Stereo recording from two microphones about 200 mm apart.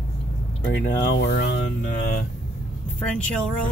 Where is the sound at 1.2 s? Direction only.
55° left (ahead or behind).